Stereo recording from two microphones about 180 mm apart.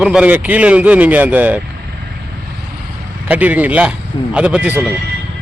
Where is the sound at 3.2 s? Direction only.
10° right (ahead or behind).